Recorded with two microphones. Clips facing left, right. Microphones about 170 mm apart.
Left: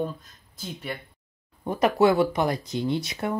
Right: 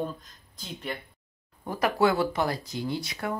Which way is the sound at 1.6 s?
20° left (ahead or behind).